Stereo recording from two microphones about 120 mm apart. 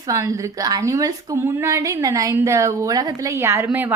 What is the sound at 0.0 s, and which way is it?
A woman's voice, 30° right (ahead or behind).